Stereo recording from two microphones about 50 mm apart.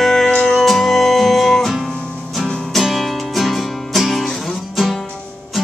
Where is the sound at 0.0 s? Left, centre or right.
Centre.